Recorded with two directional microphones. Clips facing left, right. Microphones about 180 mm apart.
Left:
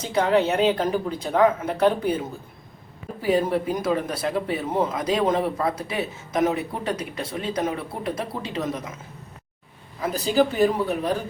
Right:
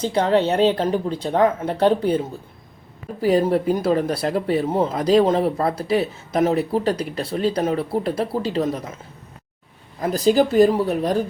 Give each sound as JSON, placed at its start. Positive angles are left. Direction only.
{"t": 0.0, "sound": "speech", "side_deg": -30}
{"t": 3.2, "sound": "speech", "side_deg": -35}
{"t": 10.0, "sound": "speech", "side_deg": -40}